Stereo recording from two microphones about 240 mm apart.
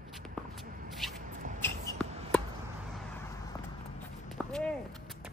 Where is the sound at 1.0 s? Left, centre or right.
Centre.